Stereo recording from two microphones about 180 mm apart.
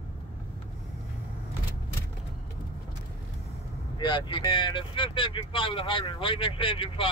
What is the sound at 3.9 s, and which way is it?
Speech, 25° left (ahead or behind).